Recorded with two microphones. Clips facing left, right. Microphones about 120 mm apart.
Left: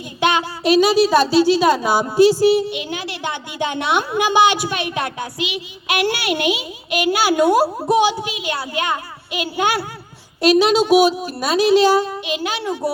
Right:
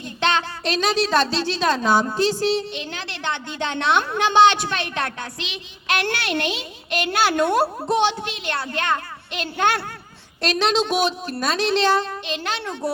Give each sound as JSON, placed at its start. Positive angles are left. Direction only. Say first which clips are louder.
{"t": 0.2, "sound": "a woman's voice", "louder": "left 4 dB", "side_deg": 10}